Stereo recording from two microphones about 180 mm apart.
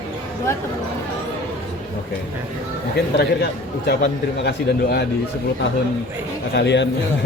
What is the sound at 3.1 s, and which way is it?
A man's voice, 65° left (ahead or behind).